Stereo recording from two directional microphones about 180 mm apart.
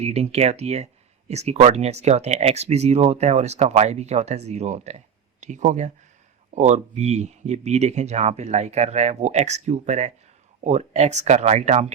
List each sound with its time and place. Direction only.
0.0 s speech: 35° right (ahead or behind)